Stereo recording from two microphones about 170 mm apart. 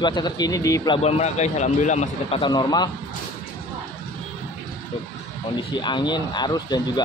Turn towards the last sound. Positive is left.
turn(degrees=25)  # may be behind; listen again after turning